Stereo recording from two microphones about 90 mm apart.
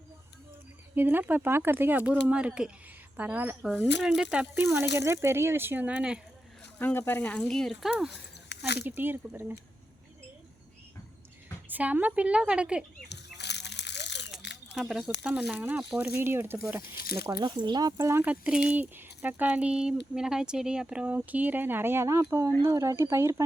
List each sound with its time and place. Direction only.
0.9 s speech: 20° right (ahead or behind)
3.9 s speech: 5° right (ahead or behind)
4.6 s speech: 30° right (ahead or behind)
6.7 s speech: 20° left (ahead or behind); by 8.2 s 5° right (ahead or behind)
8.9 s speech: 20° right (ahead or behind)
11.7 s speech: 20° right (ahead or behind)
13.3 s a sound: centre (ahead or behind)
15.2 s speech: 15° right (ahead or behind)
17.3 s speech: 55° right (ahead or behind)
17.9 s speech: 35° right (ahead or behind)
18.2 s speech: 15° right (ahead or behind); by 23.4 s 30° right (ahead or behind)